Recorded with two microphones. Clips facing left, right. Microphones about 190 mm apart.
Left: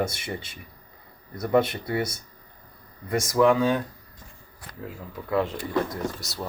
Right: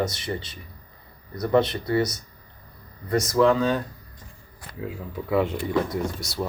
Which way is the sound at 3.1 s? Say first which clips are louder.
Right 1 dB; 10° left (ahead or behind).